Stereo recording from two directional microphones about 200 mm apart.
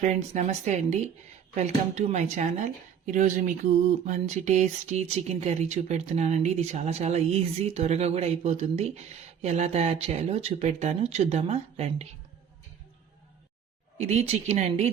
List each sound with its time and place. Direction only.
0.0 s speech: 35° right (ahead or behind)
14.0 s speech: 35° right (ahead or behind)